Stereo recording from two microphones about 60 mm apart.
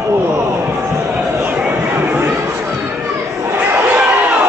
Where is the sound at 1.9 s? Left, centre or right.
Right.